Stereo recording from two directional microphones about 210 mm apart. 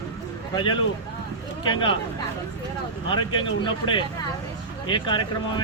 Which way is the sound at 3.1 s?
20° left (ahead or behind).